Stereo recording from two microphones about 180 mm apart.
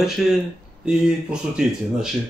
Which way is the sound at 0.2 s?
5° right (ahead or behind).